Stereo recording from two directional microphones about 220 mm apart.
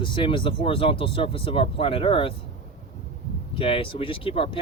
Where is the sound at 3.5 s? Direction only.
25° left (ahead or behind).